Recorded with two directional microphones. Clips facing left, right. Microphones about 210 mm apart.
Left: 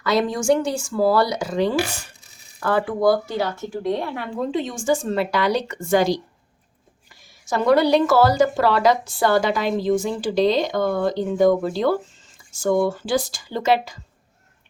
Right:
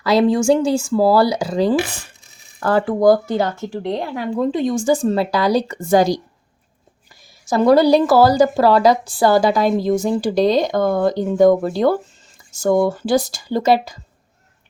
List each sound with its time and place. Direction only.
0.0 s a woman's voice: 30° right (ahead or behind); by 3.5 s 50° right (ahead or behind)
4.0 s a woman's voice: 35° right (ahead or behind)
7.4 s a woman's voice: 35° right (ahead or behind)